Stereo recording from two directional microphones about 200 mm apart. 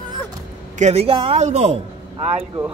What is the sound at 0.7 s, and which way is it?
Speech, 35° right (ahead or behind).